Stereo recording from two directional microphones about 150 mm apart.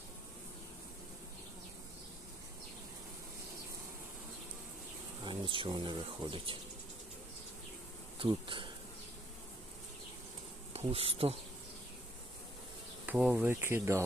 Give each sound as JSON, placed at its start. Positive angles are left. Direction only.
{"t": 5.2, "sound": "speech", "side_deg": -35}
{"t": 8.2, "sound": "bee", "side_deg": -35}
{"t": 10.8, "sound": "bee", "side_deg": -40}
{"t": 13.1, "sound": "speech", "side_deg": -10}